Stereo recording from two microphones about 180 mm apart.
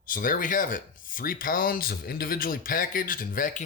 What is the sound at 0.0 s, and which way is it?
Speech, 50° left (ahead or behind).